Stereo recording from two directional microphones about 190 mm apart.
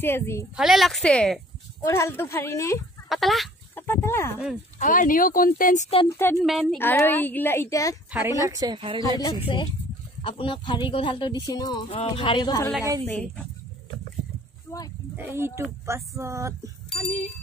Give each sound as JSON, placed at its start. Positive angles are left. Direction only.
{"t": 0.0, "sound": "speech", "side_deg": 10}
{"t": 0.6, "sound": "speech", "side_deg": 0}
{"t": 3.1, "sound": "chicken", "side_deg": 0}
{"t": 3.8, "sound": "speech", "side_deg": 10}
{"t": 4.7, "sound": "speech", "side_deg": 45}
{"t": 6.0, "sound": "speech", "side_deg": 15}
{"t": 6.4, "sound": "speech", "side_deg": 0}
{"t": 6.8, "sound": "speech", "side_deg": 10}
{"t": 8.1, "sound": "a woman's voice", "side_deg": -10}
{"t": 9.2, "sound": "speech", "side_deg": 25}
{"t": 13.0, "sound": "speech", "side_deg": 5}
{"t": 14.7, "sound": "speech", "side_deg": 10}
{"t": 15.1, "sound": "speech", "side_deg": -10}